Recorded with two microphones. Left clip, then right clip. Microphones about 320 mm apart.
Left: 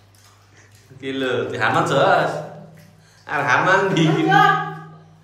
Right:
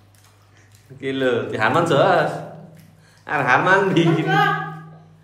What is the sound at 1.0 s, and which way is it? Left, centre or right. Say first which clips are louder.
A man's voice: right 2 dB; right.